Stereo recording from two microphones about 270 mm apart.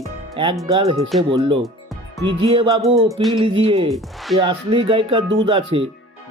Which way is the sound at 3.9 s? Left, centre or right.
Centre.